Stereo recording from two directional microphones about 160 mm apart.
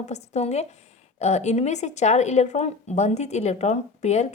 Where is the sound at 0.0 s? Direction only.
45° left (ahead or behind).